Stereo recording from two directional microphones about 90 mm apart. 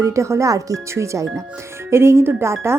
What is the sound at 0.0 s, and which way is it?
Speech, 35° right (ahead or behind).